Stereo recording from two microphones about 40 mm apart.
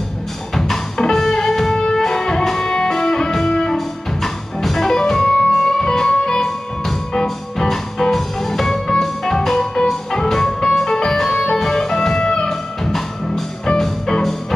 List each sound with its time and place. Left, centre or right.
0.6 s music: centre